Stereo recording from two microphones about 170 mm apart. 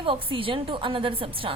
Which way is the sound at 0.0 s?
30° right (ahead or behind).